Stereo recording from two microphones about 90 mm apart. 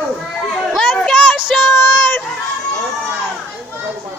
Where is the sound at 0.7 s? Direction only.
5° left (ahead or behind).